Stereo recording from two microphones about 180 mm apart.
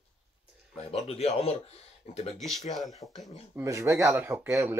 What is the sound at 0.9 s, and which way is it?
Speech, 35° left (ahead or behind).